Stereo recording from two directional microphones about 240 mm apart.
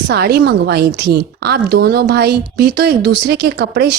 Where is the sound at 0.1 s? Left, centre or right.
Right.